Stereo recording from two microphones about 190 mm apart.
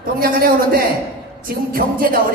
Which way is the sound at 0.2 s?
50° right (ahead or behind).